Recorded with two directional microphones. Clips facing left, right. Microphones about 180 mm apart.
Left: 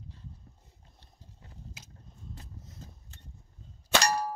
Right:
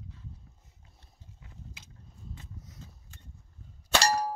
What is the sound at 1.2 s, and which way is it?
Biting, 40° left (ahead or behind).